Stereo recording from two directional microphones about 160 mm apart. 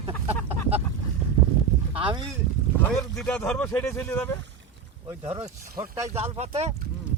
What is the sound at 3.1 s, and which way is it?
Speech, 5° left (ahead or behind).